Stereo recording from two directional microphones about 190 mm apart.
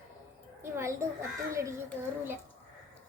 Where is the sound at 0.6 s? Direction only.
15° right (ahead or behind).